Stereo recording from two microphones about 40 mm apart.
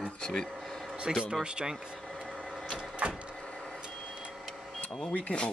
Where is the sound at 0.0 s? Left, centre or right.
Centre.